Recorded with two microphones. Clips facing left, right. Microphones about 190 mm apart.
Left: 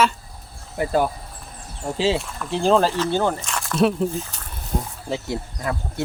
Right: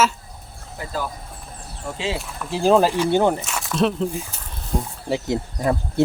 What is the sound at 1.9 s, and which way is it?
Speech, 35° left (ahead or behind).